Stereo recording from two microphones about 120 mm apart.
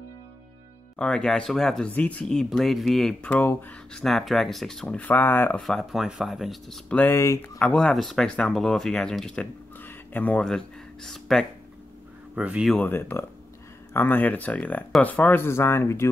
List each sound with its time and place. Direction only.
0.9 s speech: 10° left (ahead or behind)
4.0 s speech: centre (ahead or behind)
4.8 s speech: 15° left (ahead or behind)
5.6 s speech: centre (ahead or behind)
7.0 s speech: 20° left (ahead or behind)
7.7 s speech: 5° left (ahead or behind)
12.4 s speech: 10° right (ahead or behind)
12.7 s speech: 15° left (ahead or behind)